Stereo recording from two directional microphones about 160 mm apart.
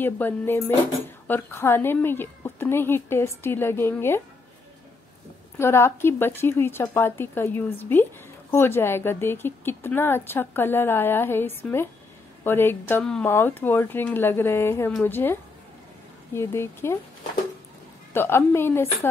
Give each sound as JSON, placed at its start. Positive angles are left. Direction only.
{"t": 0.0, "sound": "a woman's voice", "side_deg": 15}
{"t": 5.6, "sound": "a woman's voice", "side_deg": 15}
{"t": 16.3, "sound": "a woman's voice", "side_deg": 15}
{"t": 18.1, "sound": "a woman's voice", "side_deg": 15}